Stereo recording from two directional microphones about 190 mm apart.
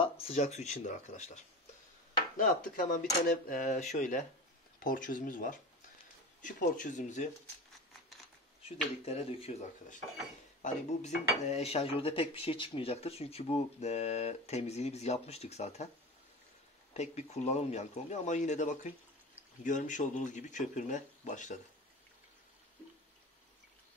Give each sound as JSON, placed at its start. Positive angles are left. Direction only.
{"t": 0.0, "sound": "speech", "side_deg": 30}
{"t": 2.7, "sound": "speech", "side_deg": 45}
{"t": 8.6, "sound": "speech", "side_deg": 30}
{"t": 16.9, "sound": "speech", "side_deg": 35}